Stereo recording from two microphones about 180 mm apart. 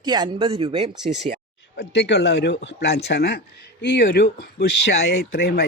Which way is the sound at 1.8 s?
70° left (ahead or behind).